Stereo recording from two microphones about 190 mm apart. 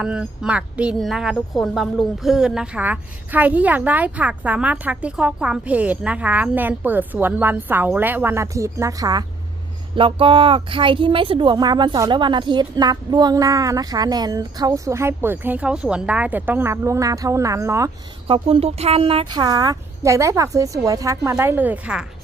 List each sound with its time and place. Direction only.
0.0 s a woman's voice: 5° right (ahead or behind)
18.3 s speech: 30° right (ahead or behind); by 22.0 s 5° right (ahead or behind)